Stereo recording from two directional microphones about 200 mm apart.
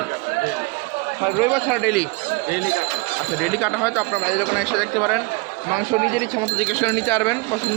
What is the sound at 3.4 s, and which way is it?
A man's voice, centre (ahead or behind).